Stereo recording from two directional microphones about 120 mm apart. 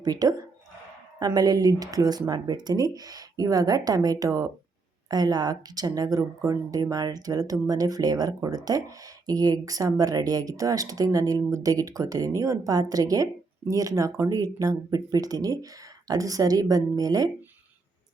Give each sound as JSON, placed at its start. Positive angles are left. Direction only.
{"t": 0.0, "sound": "speech", "side_deg": -30}